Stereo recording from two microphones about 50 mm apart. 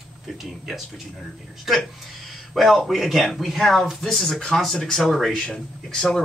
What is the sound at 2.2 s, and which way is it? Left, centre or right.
Speech, centre.